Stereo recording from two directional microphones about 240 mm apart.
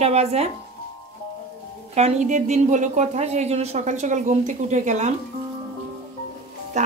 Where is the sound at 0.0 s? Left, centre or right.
Right.